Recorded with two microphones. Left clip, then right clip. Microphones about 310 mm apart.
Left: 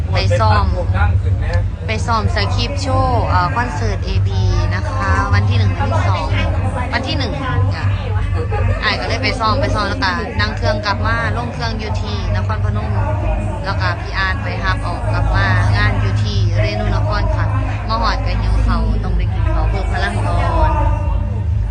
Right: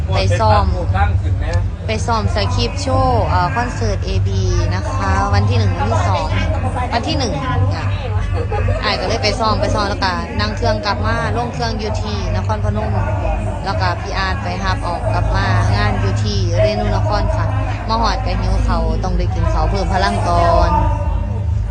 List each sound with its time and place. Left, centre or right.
0.3 s speech: centre
1.9 s speech: centre
4.9 s speech: centre
8.8 s speech: centre
13.7 s speech: centre
20.0 s speech: right